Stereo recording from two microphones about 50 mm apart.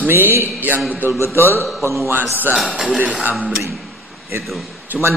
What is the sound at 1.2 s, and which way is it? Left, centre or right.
Speech, left.